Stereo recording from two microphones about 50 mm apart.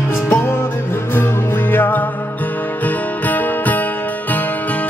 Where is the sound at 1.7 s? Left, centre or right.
Left.